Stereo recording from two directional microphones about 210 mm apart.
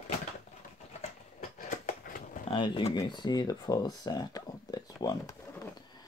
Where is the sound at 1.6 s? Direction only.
40° left (ahead or behind).